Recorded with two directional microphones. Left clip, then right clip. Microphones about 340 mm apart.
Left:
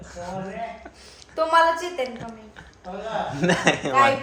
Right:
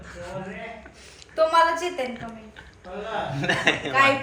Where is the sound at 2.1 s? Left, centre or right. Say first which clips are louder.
Even; centre.